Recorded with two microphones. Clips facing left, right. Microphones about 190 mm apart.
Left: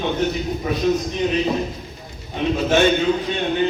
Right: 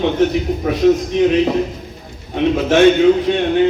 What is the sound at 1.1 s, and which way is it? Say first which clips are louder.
A man's voice: right 7 dB; 75° right (ahead or behind).